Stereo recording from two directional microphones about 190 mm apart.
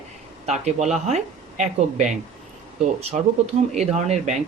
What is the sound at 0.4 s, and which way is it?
Speech, 35° right (ahead or behind).